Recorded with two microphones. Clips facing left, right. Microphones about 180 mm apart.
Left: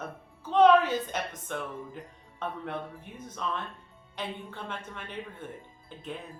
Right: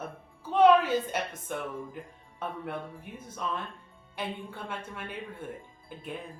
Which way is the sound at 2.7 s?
10° right (ahead or behind).